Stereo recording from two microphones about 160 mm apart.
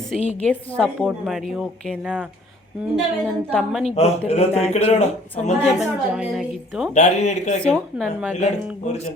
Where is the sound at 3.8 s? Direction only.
40° left (ahead or behind).